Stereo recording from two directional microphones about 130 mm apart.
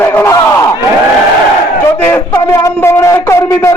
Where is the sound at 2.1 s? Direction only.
20° left (ahead or behind).